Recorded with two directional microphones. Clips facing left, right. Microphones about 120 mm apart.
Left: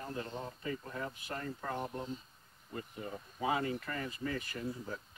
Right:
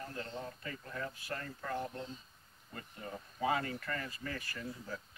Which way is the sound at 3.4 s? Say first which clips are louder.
Left 1 dB; 20° left (ahead or behind).